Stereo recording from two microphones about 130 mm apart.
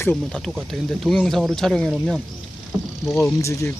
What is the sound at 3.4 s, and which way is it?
Speech, 20° left (ahead or behind).